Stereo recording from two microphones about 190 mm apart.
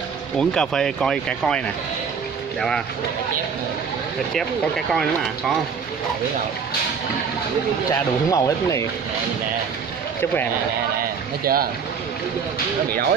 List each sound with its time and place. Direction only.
0.4 s speech: 5° left (ahead or behind)
4.3 s speech: centre (ahead or behind)
7.9 s speech: 15° left (ahead or behind)
11.4 s speech: 50° right (ahead or behind)